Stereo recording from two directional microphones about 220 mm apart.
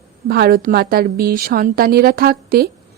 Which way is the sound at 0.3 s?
45° right (ahead or behind).